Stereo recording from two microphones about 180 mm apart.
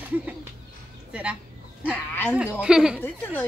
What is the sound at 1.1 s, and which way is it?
Speech, 5° right (ahead or behind).